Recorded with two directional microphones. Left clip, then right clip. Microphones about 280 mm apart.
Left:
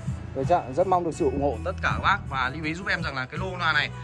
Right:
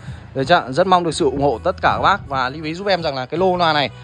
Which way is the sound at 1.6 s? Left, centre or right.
Centre.